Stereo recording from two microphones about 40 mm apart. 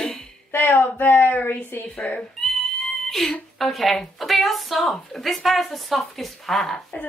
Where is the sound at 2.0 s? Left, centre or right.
Left.